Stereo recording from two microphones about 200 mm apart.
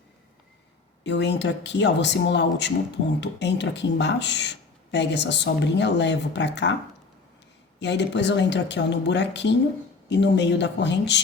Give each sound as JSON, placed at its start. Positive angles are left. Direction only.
{"t": 1.0, "sound": "speech", "side_deg": 60}
{"t": 7.8, "sound": "speech", "side_deg": 60}